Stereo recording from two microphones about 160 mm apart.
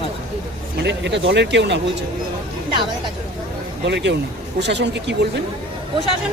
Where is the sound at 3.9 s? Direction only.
90° right.